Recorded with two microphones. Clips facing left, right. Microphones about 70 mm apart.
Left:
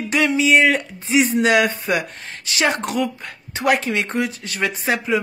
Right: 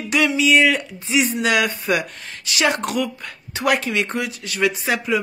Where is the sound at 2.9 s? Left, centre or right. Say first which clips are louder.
Left 1 dB; left.